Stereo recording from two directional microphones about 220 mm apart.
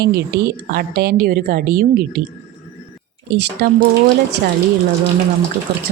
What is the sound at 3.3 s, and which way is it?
Speech, 50° right (ahead or behind).